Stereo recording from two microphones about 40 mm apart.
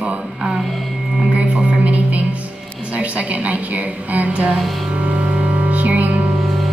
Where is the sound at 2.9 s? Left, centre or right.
Right.